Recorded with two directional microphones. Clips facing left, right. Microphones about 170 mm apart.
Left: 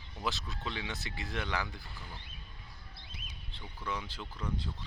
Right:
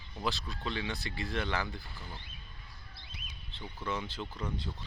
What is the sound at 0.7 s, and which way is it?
Speech, 15° left (ahead or behind).